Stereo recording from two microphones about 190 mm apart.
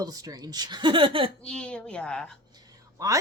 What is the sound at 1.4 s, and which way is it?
Speech, 5° left (ahead or behind).